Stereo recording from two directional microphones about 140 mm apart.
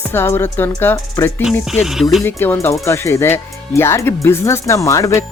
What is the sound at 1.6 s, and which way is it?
Speech, 5° right (ahead or behind).